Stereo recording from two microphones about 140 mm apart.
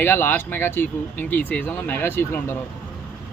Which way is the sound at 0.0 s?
15° left (ahead or behind).